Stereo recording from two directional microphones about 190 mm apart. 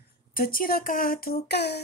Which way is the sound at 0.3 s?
50° left (ahead or behind).